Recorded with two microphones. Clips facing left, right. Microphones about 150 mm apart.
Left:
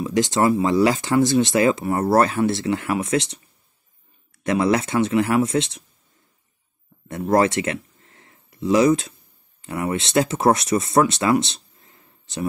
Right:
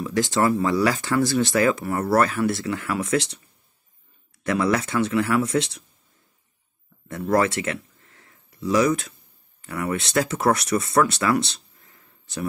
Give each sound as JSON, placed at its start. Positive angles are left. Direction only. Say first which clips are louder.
{"t": 0.0, "sound": "speech", "louder": "left 2 dB", "side_deg": 20}
{"t": 4.4, "sound": "speech", "louder": "left 3 dB", "side_deg": 20}
{"t": 7.1, "sound": "speech", "louder": "left 3 dB", "side_deg": 25}